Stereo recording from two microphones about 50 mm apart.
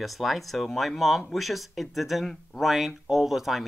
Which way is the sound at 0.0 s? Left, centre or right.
Centre.